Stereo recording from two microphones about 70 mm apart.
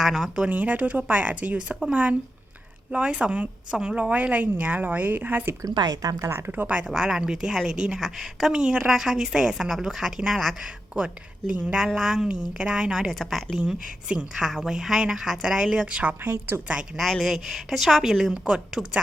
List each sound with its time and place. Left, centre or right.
0.0 s a woman's voice: centre
0.4 s a woman's voice: right
5.7 s speech: right
6.1 s a woman's voice: right
6.5 s a woman's voice: right; by 10.5 s centre
10.6 s speech: centre
11.8 s speech: centre
13.1 s a woman's voice: centre; by 16.3 s right
17.0 s a woman's voice: centre